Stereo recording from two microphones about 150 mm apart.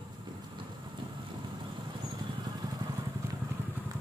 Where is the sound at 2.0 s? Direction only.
25° right (ahead or behind).